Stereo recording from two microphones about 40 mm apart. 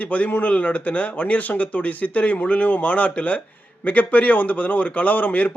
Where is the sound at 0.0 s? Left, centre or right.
Left.